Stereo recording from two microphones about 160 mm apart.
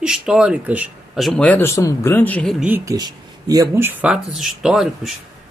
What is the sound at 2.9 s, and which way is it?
A woman's voice, 25° right (ahead or behind).